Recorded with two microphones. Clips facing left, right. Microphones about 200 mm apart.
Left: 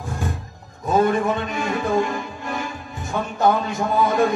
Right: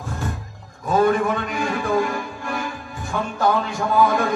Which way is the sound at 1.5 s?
20° left (ahead or behind).